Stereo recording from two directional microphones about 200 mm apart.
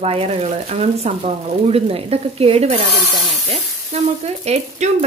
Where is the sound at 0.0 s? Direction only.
30° right (ahead or behind).